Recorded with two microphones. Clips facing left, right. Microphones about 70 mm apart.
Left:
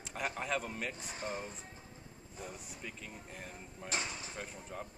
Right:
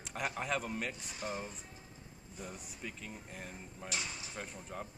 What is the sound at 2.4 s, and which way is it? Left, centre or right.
A man's voice, centre.